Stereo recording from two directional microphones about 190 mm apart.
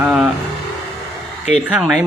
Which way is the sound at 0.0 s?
5° right (ahead or behind).